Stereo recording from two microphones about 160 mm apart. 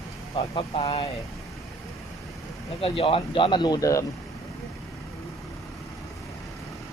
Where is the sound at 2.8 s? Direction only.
35° left (ahead or behind).